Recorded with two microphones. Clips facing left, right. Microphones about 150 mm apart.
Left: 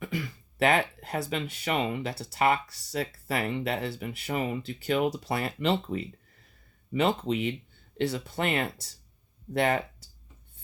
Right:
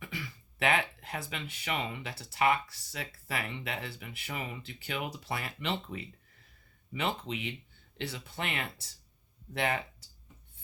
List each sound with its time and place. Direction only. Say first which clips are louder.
0.0 s speech: left 8 dB; 45° left (ahead or behind)